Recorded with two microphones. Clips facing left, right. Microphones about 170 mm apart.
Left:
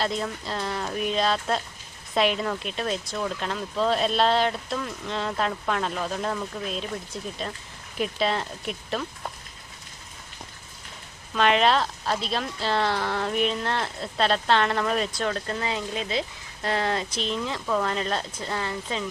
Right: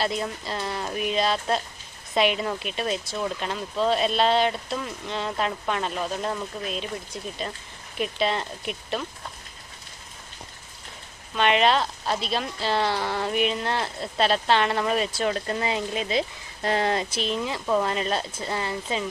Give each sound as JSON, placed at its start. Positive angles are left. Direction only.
{"t": 0.0, "sound": "speech", "side_deg": -5}
{"t": 11.3, "sound": "speech", "side_deg": 0}
{"t": 17.1, "sound": "speech", "side_deg": -10}